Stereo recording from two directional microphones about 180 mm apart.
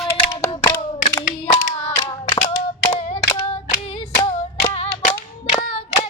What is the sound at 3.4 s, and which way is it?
Clapping, 35° left (ahead or behind).